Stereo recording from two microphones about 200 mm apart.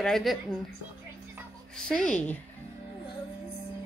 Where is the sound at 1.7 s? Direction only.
5° left (ahead or behind).